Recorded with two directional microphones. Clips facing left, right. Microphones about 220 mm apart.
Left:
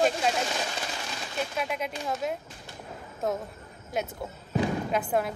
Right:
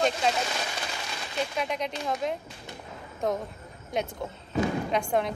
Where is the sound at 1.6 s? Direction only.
5° left (ahead or behind).